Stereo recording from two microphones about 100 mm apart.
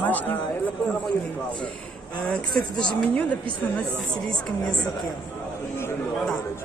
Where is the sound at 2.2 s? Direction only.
10° left (ahead or behind).